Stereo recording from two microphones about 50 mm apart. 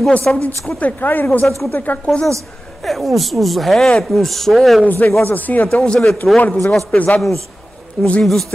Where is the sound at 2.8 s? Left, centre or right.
Centre.